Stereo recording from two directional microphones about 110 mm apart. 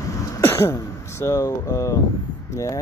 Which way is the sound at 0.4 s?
25° left (ahead or behind).